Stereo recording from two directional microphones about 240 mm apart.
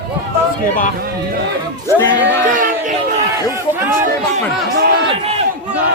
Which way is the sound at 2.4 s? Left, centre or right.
Right.